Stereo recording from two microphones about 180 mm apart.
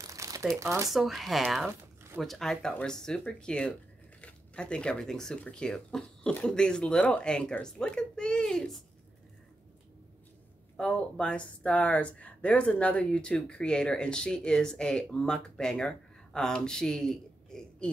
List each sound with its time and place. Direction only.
0.0 s crumpling: 20° right (ahead or behind)
0.6 s speech: 15° right (ahead or behind)
0.8 s speech: centre (ahead or behind)
10.8 s speech: 5° left (ahead or behind)